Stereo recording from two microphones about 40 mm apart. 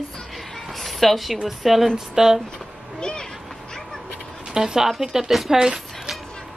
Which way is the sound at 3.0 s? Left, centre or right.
Centre.